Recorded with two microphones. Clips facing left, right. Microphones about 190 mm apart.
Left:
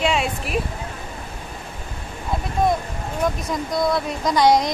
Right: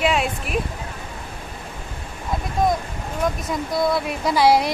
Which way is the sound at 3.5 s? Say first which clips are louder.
Even; centre (ahead or behind).